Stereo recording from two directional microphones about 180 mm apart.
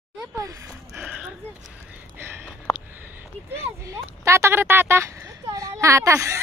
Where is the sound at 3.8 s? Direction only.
15° right (ahead or behind).